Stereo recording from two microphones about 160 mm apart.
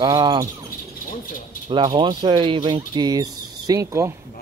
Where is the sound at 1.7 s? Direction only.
30° right (ahead or behind).